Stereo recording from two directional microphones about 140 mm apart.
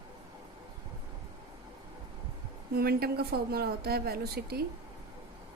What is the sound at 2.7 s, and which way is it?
Speech, 90° right.